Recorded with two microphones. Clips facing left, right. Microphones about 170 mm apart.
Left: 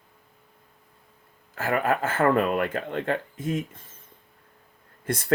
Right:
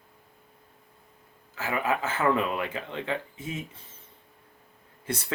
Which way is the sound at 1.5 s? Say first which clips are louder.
Left 4 dB; 50° left (ahead or behind).